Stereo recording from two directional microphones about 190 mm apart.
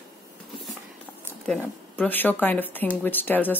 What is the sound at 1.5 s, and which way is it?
Speech, 10° left (ahead or behind).